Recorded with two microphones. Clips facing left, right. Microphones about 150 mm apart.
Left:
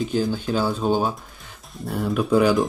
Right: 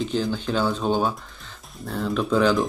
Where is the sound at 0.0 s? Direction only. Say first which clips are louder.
Left 2 dB; 5° left (ahead or behind).